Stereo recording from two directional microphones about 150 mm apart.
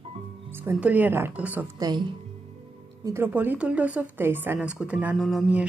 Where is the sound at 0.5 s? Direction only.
15° right (ahead or behind).